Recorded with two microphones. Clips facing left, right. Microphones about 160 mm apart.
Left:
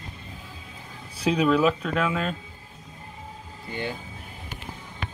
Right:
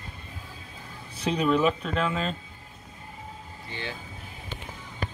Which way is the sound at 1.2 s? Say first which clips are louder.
Left 3 dB; 5° left (ahead or behind).